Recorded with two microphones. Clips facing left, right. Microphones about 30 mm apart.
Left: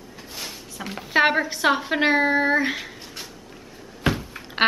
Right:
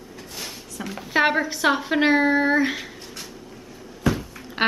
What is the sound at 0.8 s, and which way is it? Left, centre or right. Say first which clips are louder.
A woman's voice: left 1 dB; centre.